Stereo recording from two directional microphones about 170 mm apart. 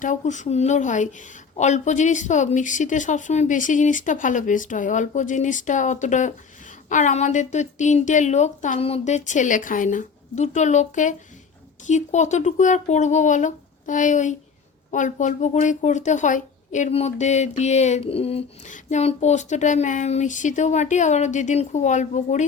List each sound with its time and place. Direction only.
0.0 s speech: 45° left (ahead or behind)